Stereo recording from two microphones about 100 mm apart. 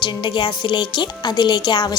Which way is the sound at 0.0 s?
50° left (ahead or behind).